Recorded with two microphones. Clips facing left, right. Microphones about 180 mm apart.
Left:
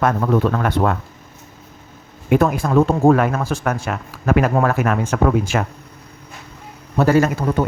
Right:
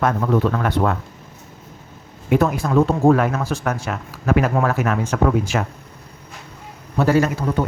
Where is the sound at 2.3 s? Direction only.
55° left (ahead or behind).